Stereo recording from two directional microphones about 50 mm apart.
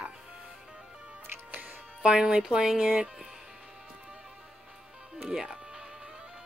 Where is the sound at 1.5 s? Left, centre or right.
Right.